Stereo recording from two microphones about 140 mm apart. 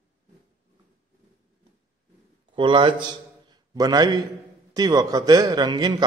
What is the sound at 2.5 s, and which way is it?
A man's voice, 35° right (ahead or behind).